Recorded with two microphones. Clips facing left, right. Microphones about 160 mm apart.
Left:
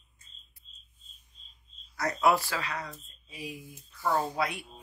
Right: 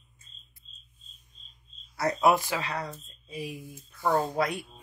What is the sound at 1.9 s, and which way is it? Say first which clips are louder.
Speech: right 2 dB; 25° right (ahead or behind).